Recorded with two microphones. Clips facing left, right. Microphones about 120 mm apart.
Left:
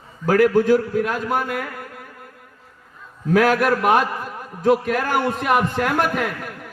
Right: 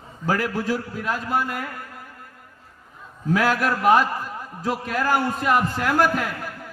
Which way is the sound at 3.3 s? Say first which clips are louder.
Left 5 dB; 65° left (ahead or behind).